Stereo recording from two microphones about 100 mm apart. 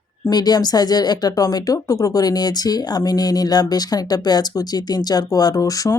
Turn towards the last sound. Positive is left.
turn(degrees=35)  # may be behind; listen again after turning